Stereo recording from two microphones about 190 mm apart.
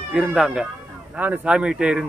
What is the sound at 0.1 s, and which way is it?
Speech, 5° right (ahead or behind).